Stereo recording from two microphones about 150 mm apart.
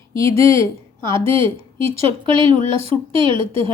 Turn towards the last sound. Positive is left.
turn(degrees=-35)  # may be behind; listen again after turning